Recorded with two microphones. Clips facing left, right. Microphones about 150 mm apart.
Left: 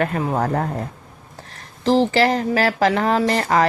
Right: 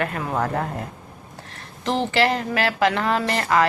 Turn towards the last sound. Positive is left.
turn(degrees=40)  # may be behind; listen again after turning